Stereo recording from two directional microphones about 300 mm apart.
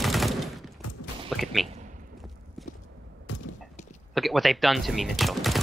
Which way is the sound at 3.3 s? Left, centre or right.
Left.